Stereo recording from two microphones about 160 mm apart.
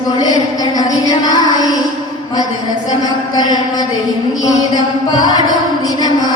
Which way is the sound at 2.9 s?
25° left (ahead or behind).